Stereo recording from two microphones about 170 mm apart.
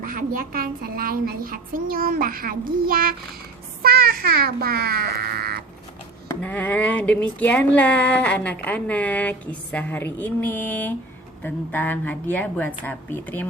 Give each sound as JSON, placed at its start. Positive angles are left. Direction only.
{"t": 0.0, "sound": "a woman's voice", "side_deg": -55}
{"t": 6.2, "sound": "speech", "side_deg": 10}